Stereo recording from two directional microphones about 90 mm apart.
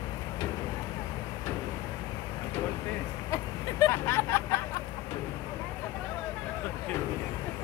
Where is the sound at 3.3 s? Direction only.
35° left (ahead or behind).